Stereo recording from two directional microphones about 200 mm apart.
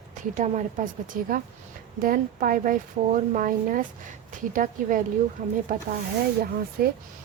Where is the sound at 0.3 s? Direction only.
35° right (ahead or behind).